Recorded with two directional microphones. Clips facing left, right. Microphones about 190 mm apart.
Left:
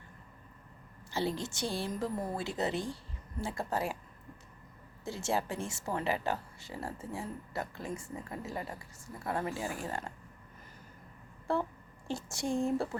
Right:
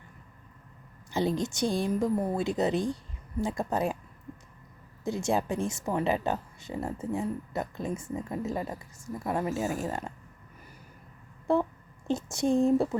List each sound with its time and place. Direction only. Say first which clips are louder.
1.1 s a woman's voice: right 6 dB; 15° right (ahead or behind)
5.0 s a woman's voice: right 6 dB; 15° right (ahead or behind)
11.5 s speech: right 6 dB; 20° right (ahead or behind)